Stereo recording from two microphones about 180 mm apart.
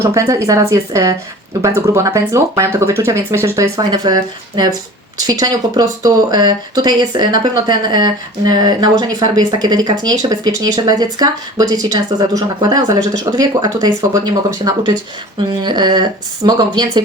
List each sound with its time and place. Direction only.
0.1 s speech: 15° right (ahead or behind)
15.4 s speech: 25° right (ahead or behind)